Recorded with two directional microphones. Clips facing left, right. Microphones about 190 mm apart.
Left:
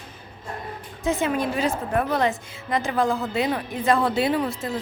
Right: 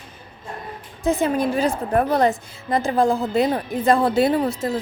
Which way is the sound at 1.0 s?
35° right (ahead or behind).